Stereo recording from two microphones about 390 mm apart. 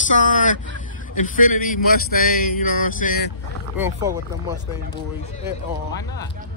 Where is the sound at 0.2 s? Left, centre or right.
Centre.